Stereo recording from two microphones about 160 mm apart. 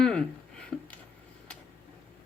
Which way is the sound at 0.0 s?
5° left (ahead or behind).